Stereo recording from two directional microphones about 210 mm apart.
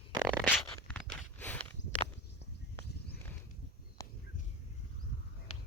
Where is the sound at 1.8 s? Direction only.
30° left (ahead or behind).